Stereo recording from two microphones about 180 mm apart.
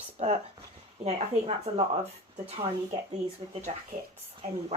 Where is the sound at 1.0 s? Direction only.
35° right (ahead or behind).